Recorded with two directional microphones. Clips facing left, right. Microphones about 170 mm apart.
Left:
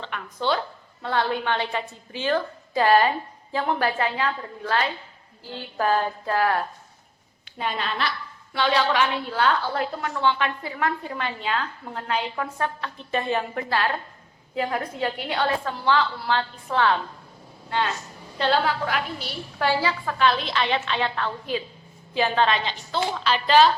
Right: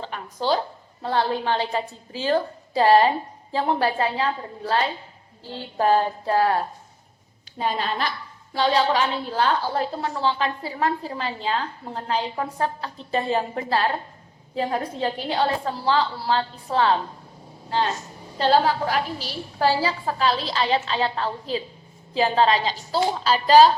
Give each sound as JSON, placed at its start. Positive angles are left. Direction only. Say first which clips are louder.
{"t": 0.0, "sound": "a woman's voice", "louder": "right 1 dB", "side_deg": -35}